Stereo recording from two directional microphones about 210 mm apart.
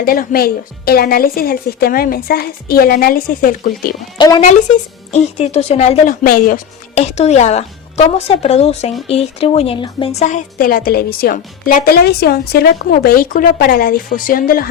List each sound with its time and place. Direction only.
0.0 s a woman's voice: 45° left (ahead or behind)
4.2 s speech: 20° left (ahead or behind)
5.1 s speech: 30° left (ahead or behind)